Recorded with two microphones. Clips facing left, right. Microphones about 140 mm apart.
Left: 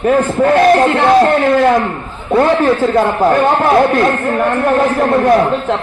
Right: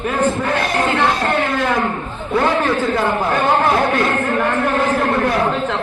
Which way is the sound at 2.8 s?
40° left (ahead or behind).